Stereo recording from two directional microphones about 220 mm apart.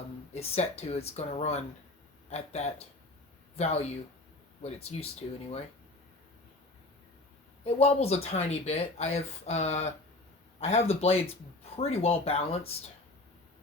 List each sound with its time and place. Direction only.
0.3 s speech: 30° left (ahead or behind)
7.6 s speech: 30° left (ahead or behind)